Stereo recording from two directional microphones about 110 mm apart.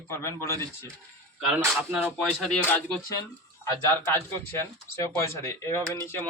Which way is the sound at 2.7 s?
15° left (ahead or behind).